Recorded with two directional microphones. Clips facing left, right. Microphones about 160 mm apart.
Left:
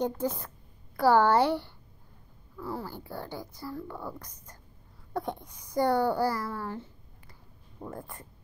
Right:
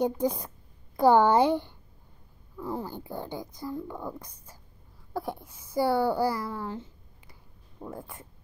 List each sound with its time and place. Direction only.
0.0 s speech: 15° right (ahead or behind)
7.8 s speech: centre (ahead or behind)